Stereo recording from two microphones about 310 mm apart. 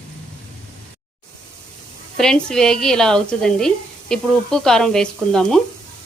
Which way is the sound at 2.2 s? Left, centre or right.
Centre.